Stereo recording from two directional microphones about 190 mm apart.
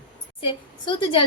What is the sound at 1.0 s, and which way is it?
Speech, 25° left (ahead or behind).